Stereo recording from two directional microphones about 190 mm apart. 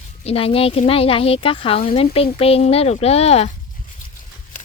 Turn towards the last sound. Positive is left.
turn(degrees=35)  # may be behind; listen again after turning